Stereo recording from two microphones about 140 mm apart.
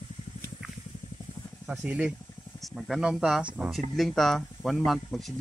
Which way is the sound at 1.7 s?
10° right (ahead or behind).